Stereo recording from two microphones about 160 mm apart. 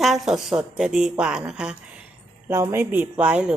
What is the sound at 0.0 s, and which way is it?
A woman's voice, centre (ahead or behind).